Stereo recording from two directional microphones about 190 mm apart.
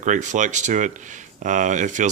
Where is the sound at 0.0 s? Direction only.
40° right (ahead or behind).